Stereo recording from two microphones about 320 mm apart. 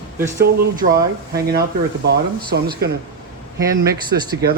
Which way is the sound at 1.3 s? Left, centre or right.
Right.